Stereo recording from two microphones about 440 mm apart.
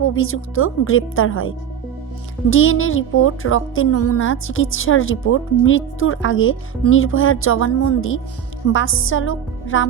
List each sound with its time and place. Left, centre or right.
0.1 s speech: left